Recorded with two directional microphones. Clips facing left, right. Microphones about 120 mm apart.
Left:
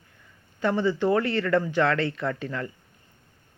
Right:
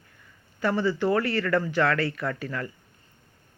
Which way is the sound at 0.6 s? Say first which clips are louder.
Left 1 dB; 20° left (ahead or behind).